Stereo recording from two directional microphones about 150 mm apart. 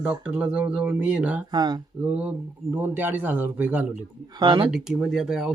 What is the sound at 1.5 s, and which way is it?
Speech, 25° right (ahead or behind).